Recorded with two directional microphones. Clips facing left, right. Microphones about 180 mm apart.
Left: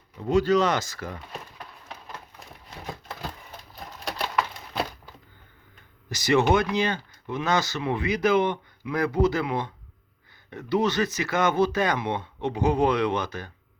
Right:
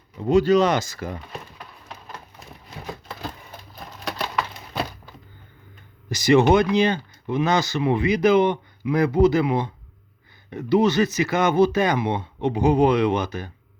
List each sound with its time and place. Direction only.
0.2 s speech: 15° right (ahead or behind)
6.1 s speech: 15° right (ahead or behind)